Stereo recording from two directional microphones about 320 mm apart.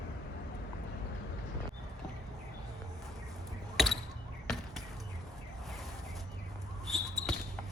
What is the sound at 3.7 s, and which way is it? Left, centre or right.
Basketball bounce, centre.